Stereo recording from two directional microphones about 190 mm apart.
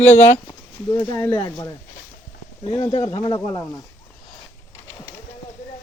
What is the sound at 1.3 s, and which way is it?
Speech, 25° left (ahead or behind).